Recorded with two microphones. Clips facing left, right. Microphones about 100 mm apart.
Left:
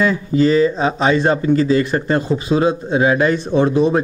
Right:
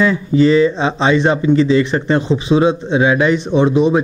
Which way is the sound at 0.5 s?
25° right (ahead or behind).